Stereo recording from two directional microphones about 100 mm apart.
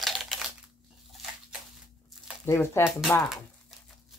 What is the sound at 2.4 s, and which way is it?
Speech, 25° left (ahead or behind).